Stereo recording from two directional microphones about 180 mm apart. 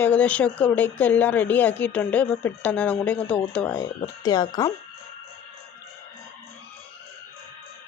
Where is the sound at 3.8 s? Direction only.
20° left (ahead or behind).